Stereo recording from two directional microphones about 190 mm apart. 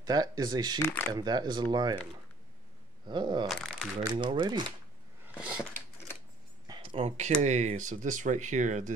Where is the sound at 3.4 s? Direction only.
Centre (ahead or behind).